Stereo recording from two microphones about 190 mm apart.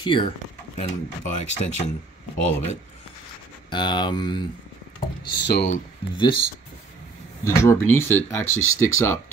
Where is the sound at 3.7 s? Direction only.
25° left (ahead or behind).